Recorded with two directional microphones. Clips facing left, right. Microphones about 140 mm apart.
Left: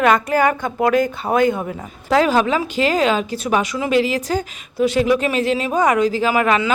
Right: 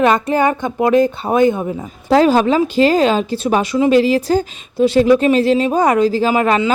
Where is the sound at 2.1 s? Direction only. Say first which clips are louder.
Right 4 dB; 30° right (ahead or behind).